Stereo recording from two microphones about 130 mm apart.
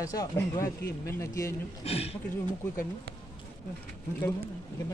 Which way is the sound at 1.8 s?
50° left (ahead or behind).